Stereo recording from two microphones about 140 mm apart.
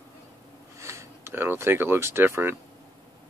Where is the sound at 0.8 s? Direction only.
20° right (ahead or behind).